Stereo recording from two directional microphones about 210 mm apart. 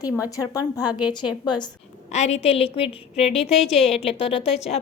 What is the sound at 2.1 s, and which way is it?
A woman's voice, 30° left (ahead or behind).